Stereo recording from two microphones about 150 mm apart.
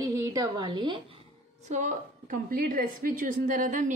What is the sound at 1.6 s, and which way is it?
A woman's voice, 55° right (ahead or behind).